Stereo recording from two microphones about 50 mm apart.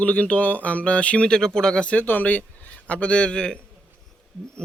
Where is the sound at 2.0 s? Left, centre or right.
Left.